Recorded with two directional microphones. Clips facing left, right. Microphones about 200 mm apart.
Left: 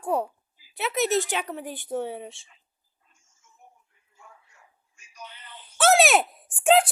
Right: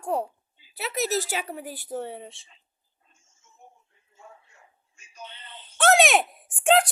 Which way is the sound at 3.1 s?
25° right (ahead or behind).